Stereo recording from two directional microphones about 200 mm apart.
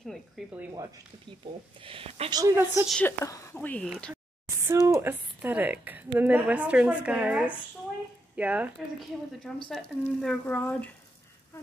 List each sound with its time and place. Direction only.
0.0 s speech: centre (ahead or behind)
1.8 s a woman's voice: 25° right (ahead or behind)
2.9 s speech: 10° left (ahead or behind)
3.9 s speech: 5° right (ahead or behind)
4.6 s a woman's voice: 15° right (ahead or behind); by 10.9 s 5° left (ahead or behind)